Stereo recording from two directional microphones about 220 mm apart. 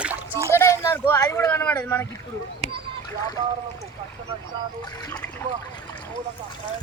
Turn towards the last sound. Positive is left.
turn(degrees=5)  # may be behind; listen again after turning